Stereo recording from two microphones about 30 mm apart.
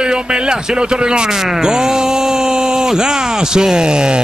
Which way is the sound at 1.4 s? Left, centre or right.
Centre.